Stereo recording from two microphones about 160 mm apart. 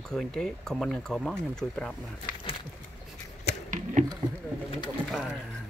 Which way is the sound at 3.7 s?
50° right (ahead or behind).